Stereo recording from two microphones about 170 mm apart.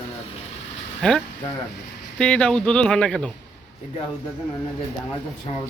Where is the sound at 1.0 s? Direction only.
5° left (ahead or behind).